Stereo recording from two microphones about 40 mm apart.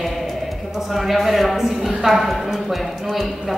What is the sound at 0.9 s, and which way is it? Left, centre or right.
A woman's voice, centre.